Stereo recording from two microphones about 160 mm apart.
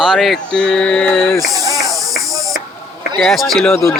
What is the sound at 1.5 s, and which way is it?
Insect, 20° right (ahead or behind).